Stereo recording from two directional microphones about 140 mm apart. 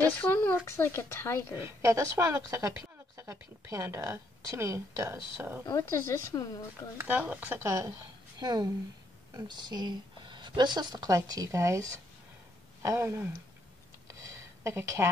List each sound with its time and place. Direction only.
0.0 s speech: 15° left (ahead or behind)
1.5 s a woman's voice: 20° right (ahead or behind)
5.7 s speech: 20° left (ahead or behind)
7.0 s a woman's voice: 10° right (ahead or behind)
14.0 s a sound: 20° right (ahead or behind)